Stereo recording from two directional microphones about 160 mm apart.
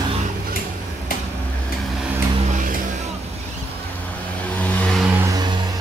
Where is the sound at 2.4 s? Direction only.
55° right (ahead or behind).